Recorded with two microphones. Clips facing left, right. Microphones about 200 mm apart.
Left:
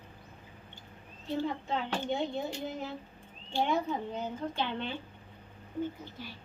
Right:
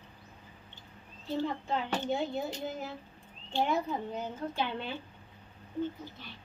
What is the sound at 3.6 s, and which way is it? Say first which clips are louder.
Speech: even; 5° right (ahead or behind).